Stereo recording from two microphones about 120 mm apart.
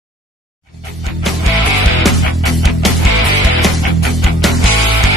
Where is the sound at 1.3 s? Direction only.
Centre (ahead or behind).